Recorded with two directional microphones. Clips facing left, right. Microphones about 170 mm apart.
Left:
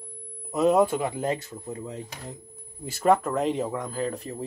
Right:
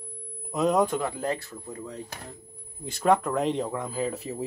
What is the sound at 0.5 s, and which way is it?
Speech, 5° left (ahead or behind).